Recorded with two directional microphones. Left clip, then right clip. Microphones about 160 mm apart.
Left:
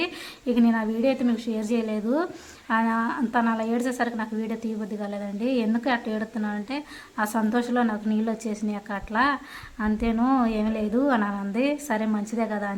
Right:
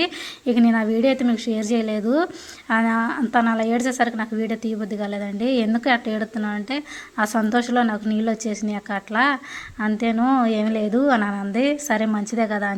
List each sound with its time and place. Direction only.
0.0 s a woman's voice: 20° right (ahead or behind)